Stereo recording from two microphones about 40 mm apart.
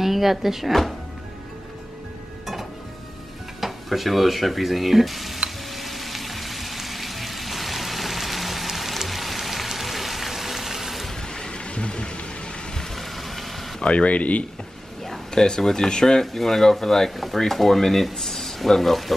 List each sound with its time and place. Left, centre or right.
0.0 s speech: centre
3.6 s speech: centre
5.7 s frying: centre
11.1 s a sound: centre
12.7 s vehicle: centre
13.8 s speech: left
15.0 s speech: centre
16.3 s speech: centre